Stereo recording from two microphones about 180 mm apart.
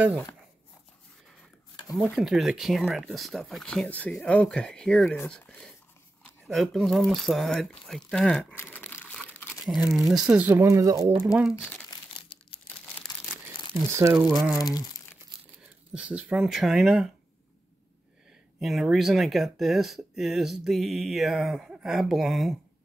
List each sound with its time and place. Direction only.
2.0 s speech: centre (ahead or behind)
9.9 s speech: centre (ahead or behind); by 11.2 s 20° right (ahead or behind)
11.6 s speech: 5° left (ahead or behind)
11.9 s crumpling: 30° left (ahead or behind)
12.6 s crumpling: 10° left (ahead or behind)
13.9 s speech: 15° right (ahead or behind)
14.3 s speech: centre (ahead or behind)
15.9 s speech: 5° right (ahead or behind)
18.6 s speech: centre (ahead or behind)